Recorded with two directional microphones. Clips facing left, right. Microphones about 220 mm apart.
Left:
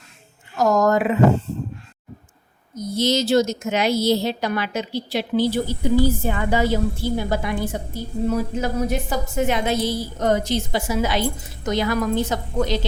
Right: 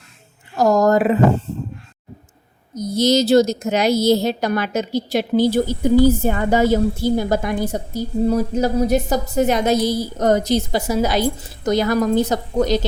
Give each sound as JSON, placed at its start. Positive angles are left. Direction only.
{"t": 0.5, "sound": "a woman's voice", "side_deg": -35}
{"t": 2.7, "sound": "a woman's voice", "side_deg": -40}